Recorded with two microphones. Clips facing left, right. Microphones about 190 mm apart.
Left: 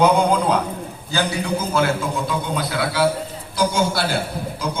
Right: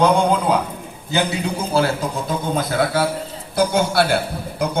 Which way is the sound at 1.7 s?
35° right (ahead or behind).